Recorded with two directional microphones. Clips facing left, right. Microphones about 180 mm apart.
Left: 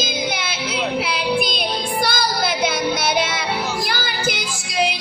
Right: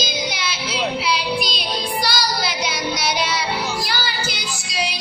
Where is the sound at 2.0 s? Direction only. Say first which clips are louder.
Left 4 dB; 55° left (ahead or behind).